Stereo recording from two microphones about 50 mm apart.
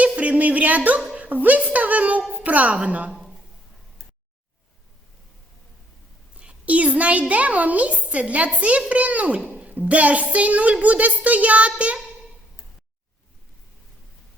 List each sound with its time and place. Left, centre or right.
0.0 s a sound: right
1.1 s a child's voice: right
6.4 s a child's voice: right